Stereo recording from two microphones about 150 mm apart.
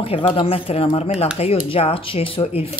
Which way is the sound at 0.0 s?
40° left (ahead or behind).